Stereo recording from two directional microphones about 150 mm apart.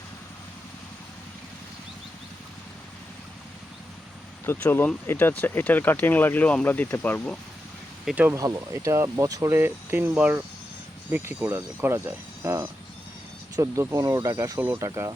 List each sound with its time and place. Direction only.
4.4 s speech: 15° left (ahead or behind)
8.0 s speech: 10° right (ahead or behind)
8.4 s speech: 20° right (ahead or behind)